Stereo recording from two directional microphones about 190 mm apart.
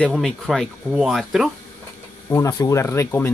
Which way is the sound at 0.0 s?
Centre (ahead or behind).